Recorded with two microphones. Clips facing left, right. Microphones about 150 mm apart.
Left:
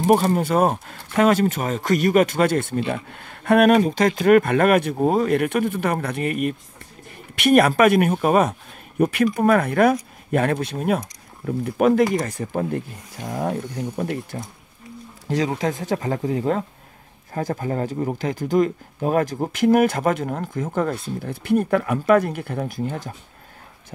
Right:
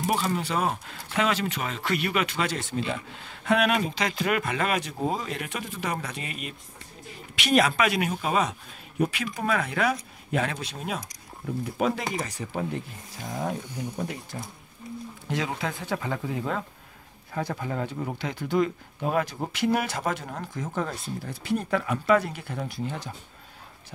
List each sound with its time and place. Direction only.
0.0 s speech: 45° left (ahead or behind)
15.2 s speech: 40° left (ahead or behind)